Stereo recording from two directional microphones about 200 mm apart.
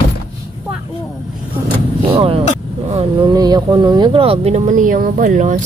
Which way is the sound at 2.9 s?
30° right (ahead or behind).